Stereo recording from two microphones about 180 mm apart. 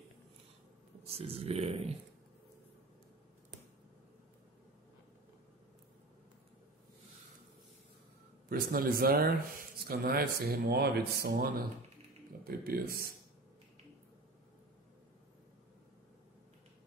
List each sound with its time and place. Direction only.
1.0 s speech: 35° right (ahead or behind)
8.5 s speech: 55° right (ahead or behind)